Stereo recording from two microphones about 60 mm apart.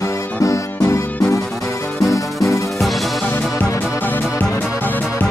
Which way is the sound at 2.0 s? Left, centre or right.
Left.